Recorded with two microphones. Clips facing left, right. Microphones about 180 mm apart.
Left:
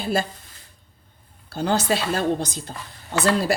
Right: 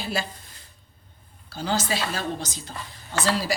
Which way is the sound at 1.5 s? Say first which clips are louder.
Left 5 dB; 60° left (ahead or behind).